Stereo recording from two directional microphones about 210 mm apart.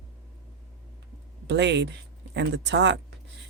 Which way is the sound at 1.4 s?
55° right (ahead or behind).